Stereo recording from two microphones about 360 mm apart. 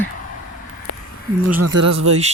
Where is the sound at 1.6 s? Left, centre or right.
Right.